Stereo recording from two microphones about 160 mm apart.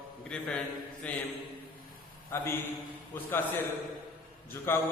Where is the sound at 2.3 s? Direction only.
15° left (ahead or behind).